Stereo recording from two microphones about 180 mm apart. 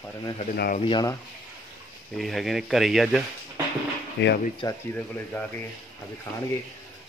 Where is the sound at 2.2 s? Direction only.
Centre (ahead or behind).